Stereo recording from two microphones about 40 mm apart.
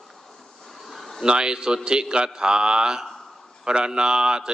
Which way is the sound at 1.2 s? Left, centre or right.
Right.